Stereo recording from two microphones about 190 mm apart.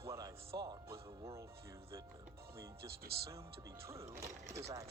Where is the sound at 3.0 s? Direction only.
55° right (ahead or behind).